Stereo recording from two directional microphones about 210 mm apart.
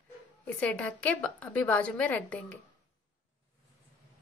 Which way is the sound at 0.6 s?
5° left (ahead or behind).